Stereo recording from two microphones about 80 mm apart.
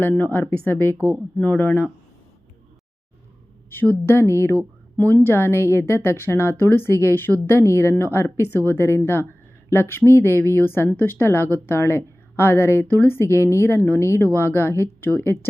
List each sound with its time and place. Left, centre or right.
0.1 s speech: centre
3.8 s a woman's voice: left